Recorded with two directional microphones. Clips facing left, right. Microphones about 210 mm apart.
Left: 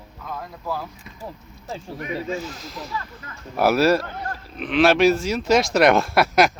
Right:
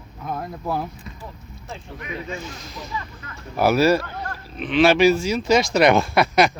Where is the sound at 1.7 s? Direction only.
40° left (ahead or behind).